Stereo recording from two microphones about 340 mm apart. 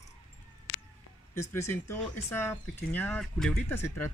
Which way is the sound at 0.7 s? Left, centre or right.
Left.